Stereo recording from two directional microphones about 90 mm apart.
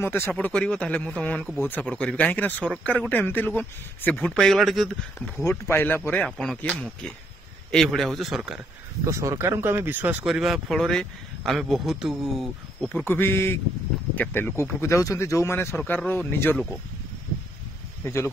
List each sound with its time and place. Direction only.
0.0 s speech: 25° left (ahead or behind)
0.3 s speech: 15° left (ahead or behind)
5.4 s speech: 25° left (ahead or behind)
6.2 s speech: 5° left (ahead or behind)
9.0 s speech: 35° right (ahead or behind); by 10.1 s 20° right (ahead or behind)
10.2 s speech: 5° right (ahead or behind)
13.0 s speech: 25° left (ahead or behind)
14.8 s speech: 35° left (ahead or behind)
18.0 s speech: 30° left (ahead or behind)